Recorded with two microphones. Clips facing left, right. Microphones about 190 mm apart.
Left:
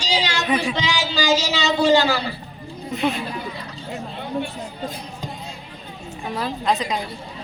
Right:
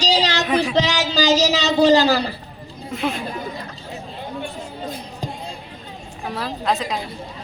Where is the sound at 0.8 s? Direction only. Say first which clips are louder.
Right 4 dB; 40° right (ahead or behind).